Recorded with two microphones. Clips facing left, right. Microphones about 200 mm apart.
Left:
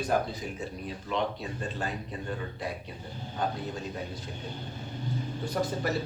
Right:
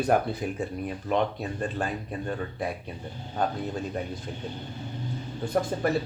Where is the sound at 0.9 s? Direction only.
50° right (ahead or behind).